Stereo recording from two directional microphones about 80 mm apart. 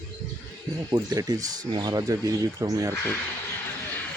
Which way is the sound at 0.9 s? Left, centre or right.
Right.